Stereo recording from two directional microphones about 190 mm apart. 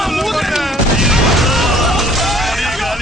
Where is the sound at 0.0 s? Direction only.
Centre (ahead or behind).